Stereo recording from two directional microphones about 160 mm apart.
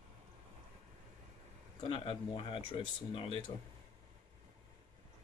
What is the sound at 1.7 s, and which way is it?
Speech, 35° left (ahead or behind).